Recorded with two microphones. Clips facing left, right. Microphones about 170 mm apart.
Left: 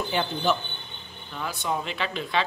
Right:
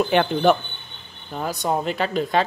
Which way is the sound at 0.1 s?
65° right (ahead or behind).